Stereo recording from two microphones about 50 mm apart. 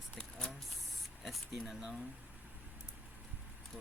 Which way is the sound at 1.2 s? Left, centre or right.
Centre.